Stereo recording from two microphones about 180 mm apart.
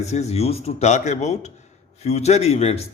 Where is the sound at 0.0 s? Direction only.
40° left (ahead or behind).